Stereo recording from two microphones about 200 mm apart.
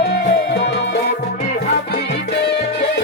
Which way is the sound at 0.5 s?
60° left (ahead or behind).